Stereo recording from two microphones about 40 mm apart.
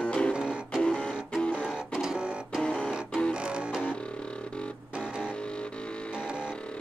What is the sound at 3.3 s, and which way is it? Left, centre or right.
Music, right.